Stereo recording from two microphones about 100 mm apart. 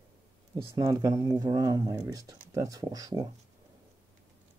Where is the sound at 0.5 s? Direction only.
35° right (ahead or behind).